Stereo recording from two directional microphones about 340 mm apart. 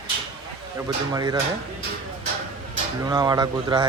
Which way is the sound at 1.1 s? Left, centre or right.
Centre.